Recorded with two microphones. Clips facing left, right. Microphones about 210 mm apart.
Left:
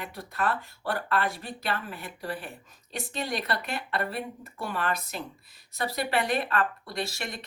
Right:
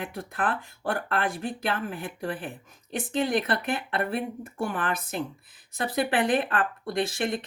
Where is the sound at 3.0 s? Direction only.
50° right (ahead or behind).